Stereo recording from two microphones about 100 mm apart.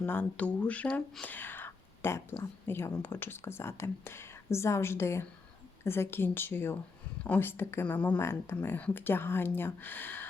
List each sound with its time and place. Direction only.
0.0 s speech: 20° left (ahead or behind)
1.2 s whispering: 20° left (ahead or behind)
2.6 s speech: 20° left (ahead or behind)